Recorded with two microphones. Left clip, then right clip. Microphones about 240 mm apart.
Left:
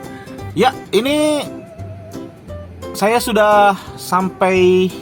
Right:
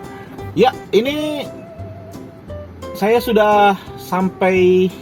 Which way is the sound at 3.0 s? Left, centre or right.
Left.